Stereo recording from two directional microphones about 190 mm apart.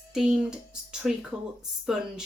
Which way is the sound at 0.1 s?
5° right (ahead or behind).